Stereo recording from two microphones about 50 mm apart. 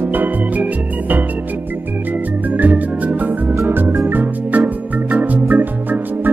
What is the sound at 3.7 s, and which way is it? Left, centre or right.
Music, right.